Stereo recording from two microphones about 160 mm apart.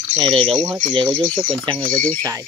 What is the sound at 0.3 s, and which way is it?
Speech, 35° right (ahead or behind).